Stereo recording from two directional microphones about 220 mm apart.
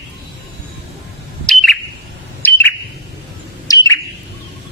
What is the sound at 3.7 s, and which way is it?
Bird, 15° left (ahead or behind).